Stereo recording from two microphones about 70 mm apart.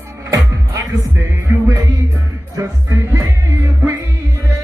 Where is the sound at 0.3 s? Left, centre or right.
Right.